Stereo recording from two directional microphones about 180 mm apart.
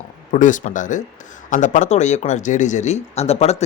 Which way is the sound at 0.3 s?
45° left (ahead or behind).